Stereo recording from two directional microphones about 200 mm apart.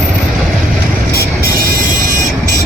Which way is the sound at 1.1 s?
45° right (ahead or behind).